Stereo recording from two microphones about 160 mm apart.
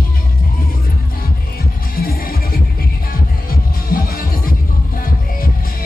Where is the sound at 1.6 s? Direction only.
70° left (ahead or behind).